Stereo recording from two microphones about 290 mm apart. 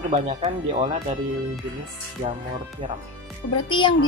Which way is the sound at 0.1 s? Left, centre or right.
Centre.